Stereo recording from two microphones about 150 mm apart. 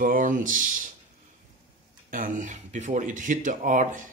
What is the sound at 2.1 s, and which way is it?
Speech, 60° right (ahead or behind).